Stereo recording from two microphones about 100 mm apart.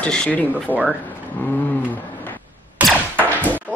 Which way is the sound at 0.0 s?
10° left (ahead or behind).